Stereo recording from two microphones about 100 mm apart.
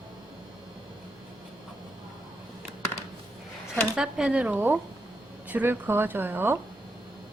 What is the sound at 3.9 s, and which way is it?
A woman's voice, 5° right (ahead or behind).